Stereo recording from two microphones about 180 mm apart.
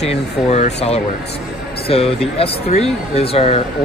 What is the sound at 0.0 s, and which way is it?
Speech, 35° left (ahead or behind).